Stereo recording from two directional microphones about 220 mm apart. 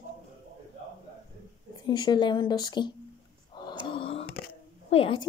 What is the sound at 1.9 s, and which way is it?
Speech, 20° left (ahead or behind).